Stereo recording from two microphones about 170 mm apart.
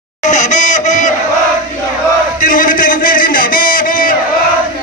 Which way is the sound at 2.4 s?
55° left (ahead or behind).